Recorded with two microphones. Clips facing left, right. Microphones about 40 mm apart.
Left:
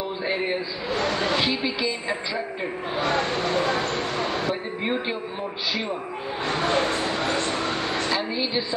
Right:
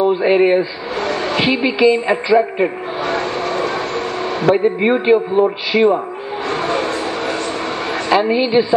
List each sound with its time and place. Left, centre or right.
0.0 s a woman's voice: right
3.7 s train: right
4.8 s a woman's voice: right
6.7 s a sound: right
8.1 s a woman's voice: right